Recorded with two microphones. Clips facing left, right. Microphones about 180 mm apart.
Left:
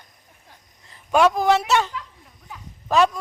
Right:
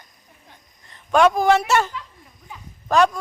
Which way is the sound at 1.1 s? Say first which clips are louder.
Right 1 dB; 5° left (ahead or behind).